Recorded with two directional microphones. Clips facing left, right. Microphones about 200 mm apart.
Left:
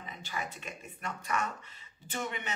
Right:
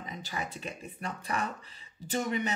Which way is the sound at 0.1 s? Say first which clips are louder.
Right 2 dB; 35° right (ahead or behind).